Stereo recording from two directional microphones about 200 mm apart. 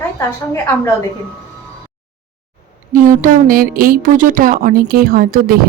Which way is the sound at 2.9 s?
40° right (ahead or behind).